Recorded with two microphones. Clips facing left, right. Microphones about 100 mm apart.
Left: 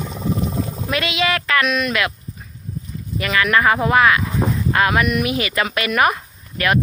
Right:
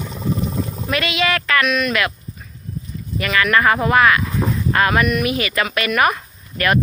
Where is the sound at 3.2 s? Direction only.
20° left (ahead or behind).